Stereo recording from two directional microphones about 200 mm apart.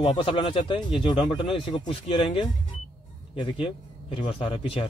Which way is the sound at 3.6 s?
25° left (ahead or behind).